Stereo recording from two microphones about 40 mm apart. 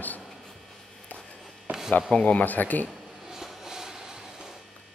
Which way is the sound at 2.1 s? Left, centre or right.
Left.